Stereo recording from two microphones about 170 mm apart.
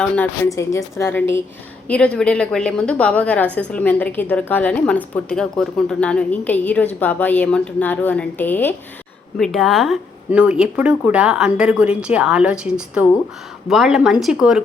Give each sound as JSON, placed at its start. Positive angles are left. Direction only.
{"t": 0.4, "sound": "a woman's voice", "side_deg": 20}